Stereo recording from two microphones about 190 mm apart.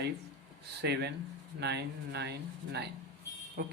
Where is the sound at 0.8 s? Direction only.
60° right (ahead or behind).